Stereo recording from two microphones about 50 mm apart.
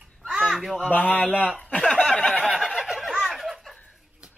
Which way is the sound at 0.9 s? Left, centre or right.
Left.